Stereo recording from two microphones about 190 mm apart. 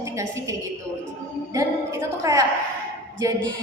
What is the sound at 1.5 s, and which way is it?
Speech, 15° right (ahead or behind).